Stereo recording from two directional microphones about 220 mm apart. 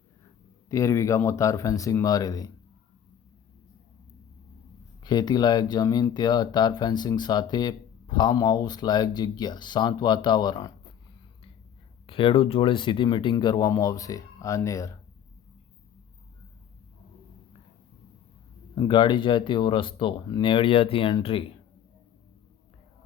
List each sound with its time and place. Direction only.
0.7 s speech: 15° left (ahead or behind)
5.0 s speech: 20° left (ahead or behind)
12.0 s speech: 25° left (ahead or behind)
18.8 s speech: 20° left (ahead or behind)